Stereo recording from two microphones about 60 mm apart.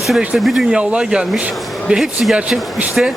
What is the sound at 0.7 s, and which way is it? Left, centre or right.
Speech, centre.